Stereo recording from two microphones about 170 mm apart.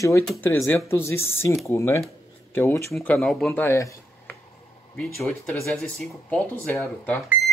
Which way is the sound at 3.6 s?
20° left (ahead or behind).